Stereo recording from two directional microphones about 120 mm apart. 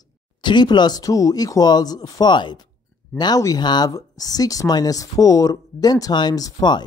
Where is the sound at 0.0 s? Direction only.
40° left (ahead or behind).